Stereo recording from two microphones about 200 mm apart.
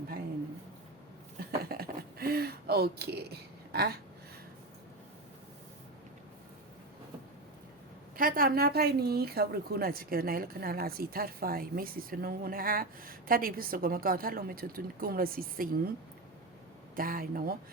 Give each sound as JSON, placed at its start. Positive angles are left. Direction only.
{"t": 1.7, "sound": "a sound", "side_deg": -50}
{"t": 8.1, "sound": "a woman's voice", "side_deg": -45}
{"t": 16.9, "sound": "a woman's voice", "side_deg": -45}